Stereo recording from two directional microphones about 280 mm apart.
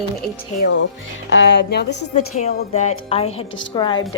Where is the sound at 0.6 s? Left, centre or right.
Left.